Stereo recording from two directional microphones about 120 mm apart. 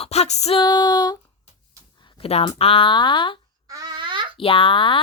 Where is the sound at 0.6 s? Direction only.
35° left (ahead or behind).